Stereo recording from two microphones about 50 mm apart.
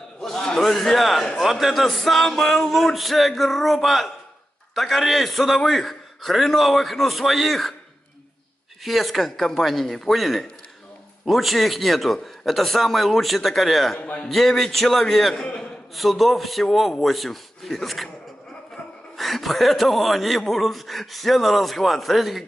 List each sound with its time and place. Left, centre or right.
0.2 s a man's voice: centre
8.8 s speech: centre
13.9 s a man's voice: left
14.2 s speech: centre
19.1 s speech: centre